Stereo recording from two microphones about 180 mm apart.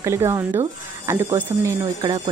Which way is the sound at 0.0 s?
15° right (ahead or behind).